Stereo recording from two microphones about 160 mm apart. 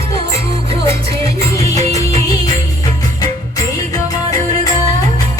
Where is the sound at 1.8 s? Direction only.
20° left (ahead or behind).